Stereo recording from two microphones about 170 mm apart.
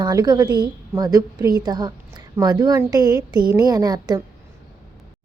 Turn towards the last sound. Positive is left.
turn(degrees=-25)  # may be behind; listen again after turning